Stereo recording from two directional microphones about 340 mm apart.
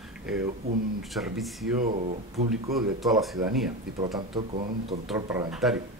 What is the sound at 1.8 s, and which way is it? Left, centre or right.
Speech, right.